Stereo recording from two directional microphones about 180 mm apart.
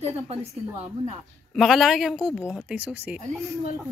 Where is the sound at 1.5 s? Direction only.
Centre (ahead or behind).